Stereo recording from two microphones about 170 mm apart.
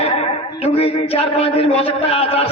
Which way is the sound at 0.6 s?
35° left (ahead or behind).